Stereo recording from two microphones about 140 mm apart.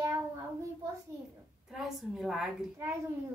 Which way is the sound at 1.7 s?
Centre (ahead or behind).